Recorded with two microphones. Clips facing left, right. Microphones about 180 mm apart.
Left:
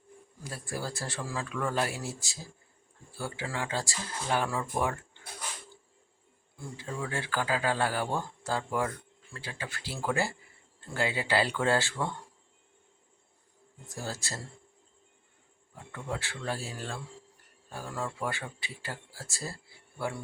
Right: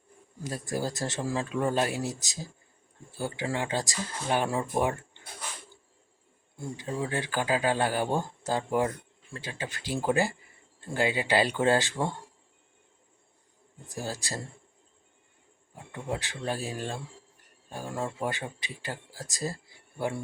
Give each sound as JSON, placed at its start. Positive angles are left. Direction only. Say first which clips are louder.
{"t": 0.9, "sound": "speech", "louder": "right 5 dB", "side_deg": -20}
{"t": 6.6, "sound": "speech", "louder": "right 4 dB", "side_deg": -20}
{"t": 13.9, "sound": "speech", "louder": "right 3 dB", "side_deg": -15}
{"t": 15.7, "sound": "speech", "louder": "right 3 dB", "side_deg": -15}